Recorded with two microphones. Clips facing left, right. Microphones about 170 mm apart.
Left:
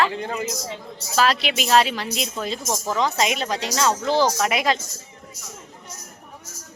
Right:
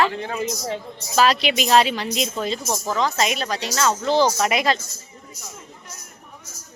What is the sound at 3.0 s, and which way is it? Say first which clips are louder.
Speech: left 1 dB; 15° left (ahead or behind).